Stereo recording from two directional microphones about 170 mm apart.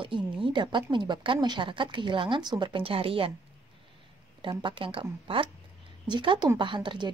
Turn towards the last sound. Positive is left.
turn(degrees=-30)  # may be behind; listen again after turning